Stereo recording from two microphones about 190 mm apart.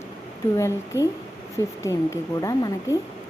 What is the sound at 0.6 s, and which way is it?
Speech, 15° left (ahead or behind).